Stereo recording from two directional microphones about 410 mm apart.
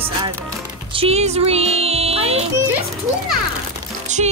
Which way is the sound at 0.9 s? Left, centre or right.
Centre.